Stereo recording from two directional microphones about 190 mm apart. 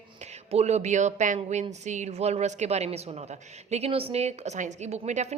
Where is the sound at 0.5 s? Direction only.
35° right (ahead or behind).